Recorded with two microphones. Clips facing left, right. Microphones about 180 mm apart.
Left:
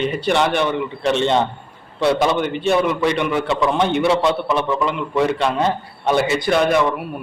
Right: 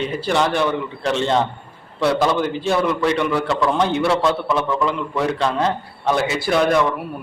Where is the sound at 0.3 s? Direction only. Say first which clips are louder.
Even; centre (ahead or behind).